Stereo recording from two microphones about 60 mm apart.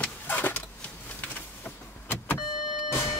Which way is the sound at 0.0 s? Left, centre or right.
Left.